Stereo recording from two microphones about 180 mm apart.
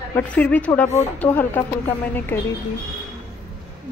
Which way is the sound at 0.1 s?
10° left (ahead or behind).